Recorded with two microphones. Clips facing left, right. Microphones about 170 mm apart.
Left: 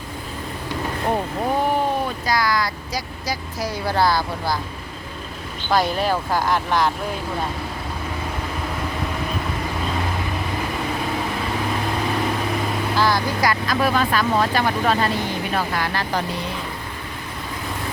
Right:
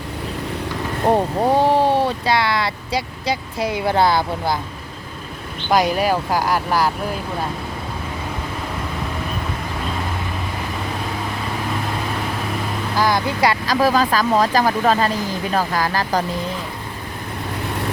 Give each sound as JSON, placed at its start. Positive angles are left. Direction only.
{"t": 1.1, "sound": "speech", "side_deg": -30}
{"t": 5.7, "sound": "speech", "side_deg": -10}
{"t": 13.0, "sound": "speech", "side_deg": -20}